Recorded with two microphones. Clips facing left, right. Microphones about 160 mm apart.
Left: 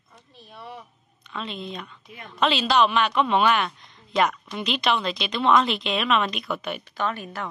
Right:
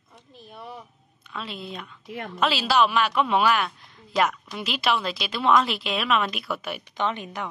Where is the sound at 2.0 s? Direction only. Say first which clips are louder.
Right 9 dB; 75° right (ahead or behind).